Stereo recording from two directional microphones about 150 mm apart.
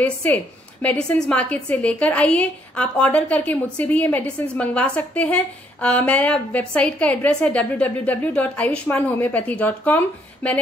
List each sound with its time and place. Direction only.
0.0 s a woman's voice: 10° left (ahead or behind)